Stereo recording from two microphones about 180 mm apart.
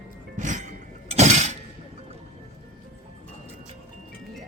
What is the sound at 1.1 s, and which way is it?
Breaking, 40° right (ahead or behind).